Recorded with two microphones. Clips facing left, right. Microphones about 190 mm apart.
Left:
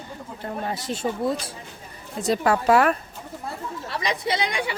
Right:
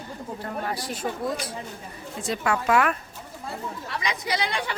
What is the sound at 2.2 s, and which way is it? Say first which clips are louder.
Speech: left 5 dB; 35° left (ahead or behind).